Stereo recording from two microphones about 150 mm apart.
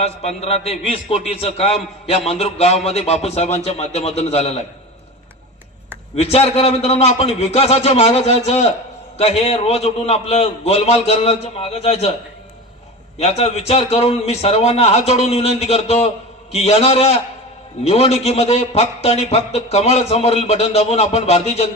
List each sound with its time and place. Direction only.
0.0 s a man's voice: 45° left (ahead or behind)
6.1 s a man's voice: 40° left (ahead or behind)
13.1 s a man's voice: 45° left (ahead or behind)